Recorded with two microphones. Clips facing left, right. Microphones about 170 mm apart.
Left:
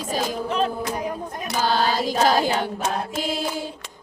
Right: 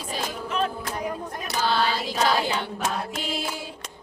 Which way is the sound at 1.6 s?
45° left (ahead or behind).